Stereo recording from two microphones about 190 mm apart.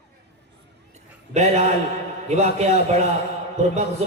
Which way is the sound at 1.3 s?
35° right (ahead or behind).